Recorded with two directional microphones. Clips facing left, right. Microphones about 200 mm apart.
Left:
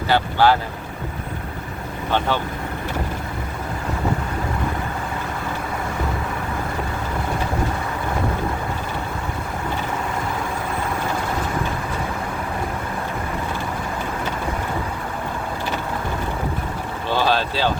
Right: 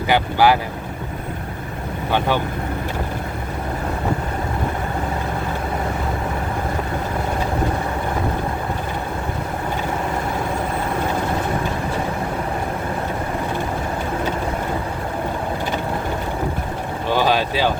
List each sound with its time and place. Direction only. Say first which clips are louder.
0.1 s speech: right 1 dB; 10° right (ahead or behind)
2.1 s speech: right 2 dB; 15° right (ahead or behind)
17.1 s vehicle: right 2 dB; 15° right (ahead or behind)